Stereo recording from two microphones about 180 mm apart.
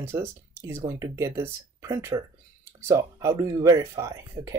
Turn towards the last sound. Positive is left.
turn(degrees=-20)  # may be behind; listen again after turning